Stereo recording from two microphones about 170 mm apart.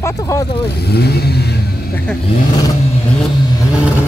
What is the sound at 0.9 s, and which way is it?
Speech, 70° left (ahead or behind).